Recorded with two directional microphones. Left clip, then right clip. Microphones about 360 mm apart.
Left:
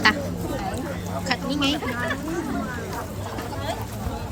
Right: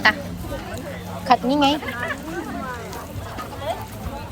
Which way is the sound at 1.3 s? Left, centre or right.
Centre.